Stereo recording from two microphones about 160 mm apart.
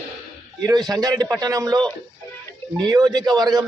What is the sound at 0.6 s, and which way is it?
A man's voice, 25° right (ahead or behind).